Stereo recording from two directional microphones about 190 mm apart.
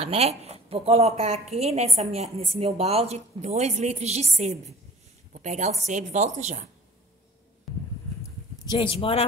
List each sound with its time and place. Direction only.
0.0 s a woman's voice: 30° right (ahead or behind)
8.2 s clip-clop: 20° left (ahead or behind)